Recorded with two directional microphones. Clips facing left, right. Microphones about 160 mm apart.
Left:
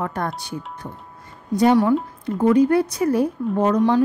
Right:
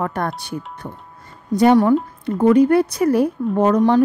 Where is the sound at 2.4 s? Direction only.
65° right (ahead or behind).